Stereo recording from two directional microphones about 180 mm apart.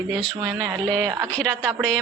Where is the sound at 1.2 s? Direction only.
5° left (ahead or behind).